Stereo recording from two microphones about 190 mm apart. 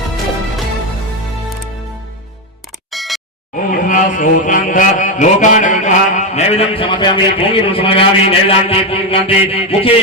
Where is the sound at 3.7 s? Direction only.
45° left (ahead or behind); by 7.2 s 25° left (ahead or behind).